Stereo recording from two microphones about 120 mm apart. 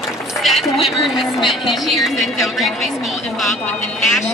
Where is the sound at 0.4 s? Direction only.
Centre (ahead or behind).